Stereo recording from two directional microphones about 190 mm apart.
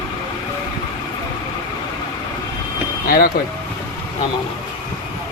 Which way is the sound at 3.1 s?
50° left (ahead or behind).